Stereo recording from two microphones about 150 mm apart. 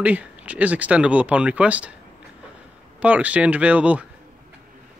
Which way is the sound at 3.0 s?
10° right (ahead or behind).